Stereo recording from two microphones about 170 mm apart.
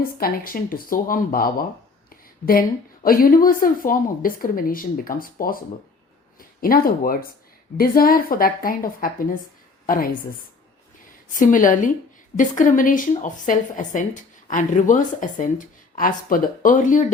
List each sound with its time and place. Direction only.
0.2 s a woman's voice: 60° left (ahead or behind)
11.3 s a woman's voice: 50° left (ahead or behind)